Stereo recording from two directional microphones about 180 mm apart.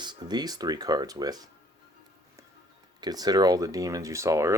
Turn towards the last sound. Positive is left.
turn(degrees=-15)  # may be behind; listen again after turning